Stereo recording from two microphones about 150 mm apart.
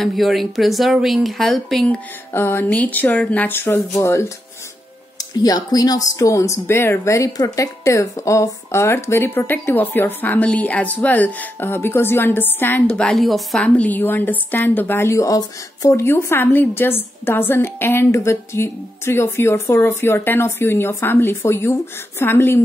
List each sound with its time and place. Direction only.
0.0 s speech: centre (ahead or behind)
2.3 s a woman's voice: 15° left (ahead or behind)
5.4 s a woman's voice: 25° left (ahead or behind)